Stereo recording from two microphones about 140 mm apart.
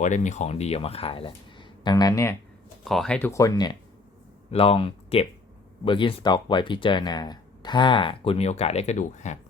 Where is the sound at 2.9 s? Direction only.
5° left (ahead or behind).